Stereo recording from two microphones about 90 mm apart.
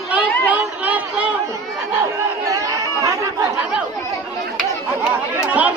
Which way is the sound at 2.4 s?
40° right (ahead or behind).